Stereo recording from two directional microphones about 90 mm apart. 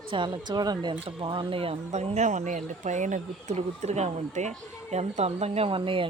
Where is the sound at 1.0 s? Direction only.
70° right (ahead or behind); by 2.1 s 90° right.